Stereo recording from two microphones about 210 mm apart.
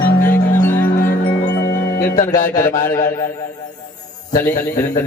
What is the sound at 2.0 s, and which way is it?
Speech, 35° left (ahead or behind).